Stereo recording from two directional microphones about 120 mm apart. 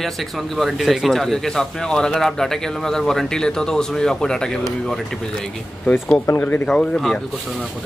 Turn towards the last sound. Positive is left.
turn(degrees=5)  # may be behind; listen again after turning